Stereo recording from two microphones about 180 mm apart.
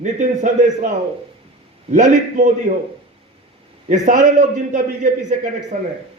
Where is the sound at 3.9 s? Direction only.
45° right (ahead or behind).